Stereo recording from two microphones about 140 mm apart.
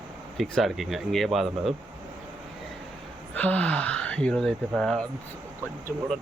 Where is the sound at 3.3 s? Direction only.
10° left (ahead or behind).